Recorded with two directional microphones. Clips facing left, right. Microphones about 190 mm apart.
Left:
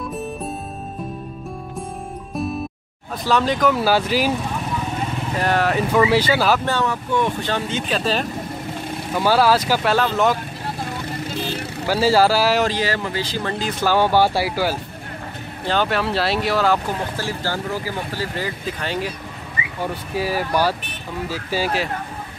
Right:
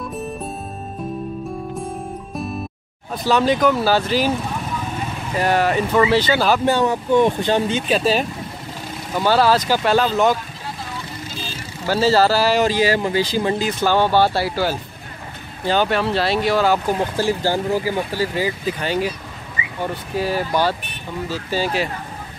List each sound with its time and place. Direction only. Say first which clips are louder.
3.3 s speech: right 2 dB; centre (ahead or behind)
5.4 s speech: right 2 dB; 5° right (ahead or behind)
6.6 s speech: right 4 dB; 15° right (ahead or behind)
9.2 s speech: right 1 dB; 5° left (ahead or behind)
11.1 s vehicle: left 6 dB; 60° left (ahead or behind)
11.9 s speech: even; 10° left (ahead or behind)
12.6 s speech: right 4 dB; 10° right (ahead or behind)
13.7 s speech: right 1 dB; 5° left (ahead or behind)
15.6 s speech: right 2 dB; 5° right (ahead or behind)
17.2 s speech: right 6 dB; 15° right (ahead or behind)
20.2 s speech: right 1 dB; 5° left (ahead or behind)
21.5 s speech: right 1 dB; 10° left (ahead or behind)